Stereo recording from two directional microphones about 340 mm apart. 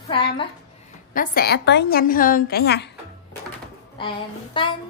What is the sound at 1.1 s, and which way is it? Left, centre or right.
A woman's voice, left.